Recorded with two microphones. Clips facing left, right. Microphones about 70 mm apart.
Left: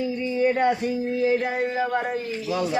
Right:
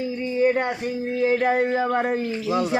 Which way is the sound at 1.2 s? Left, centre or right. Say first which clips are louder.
Right 4 dB; right.